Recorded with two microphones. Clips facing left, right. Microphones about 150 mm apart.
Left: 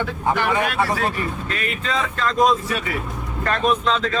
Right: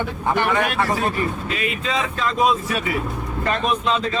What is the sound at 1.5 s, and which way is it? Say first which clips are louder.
Speech: right 1 dB; 10° right (ahead or behind).